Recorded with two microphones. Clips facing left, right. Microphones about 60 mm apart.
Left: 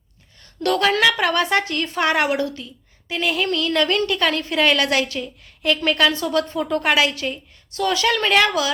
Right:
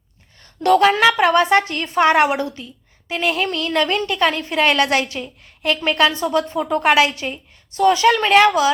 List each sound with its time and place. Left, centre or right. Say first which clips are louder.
0.3 s a woman's voice: right 6 dB; right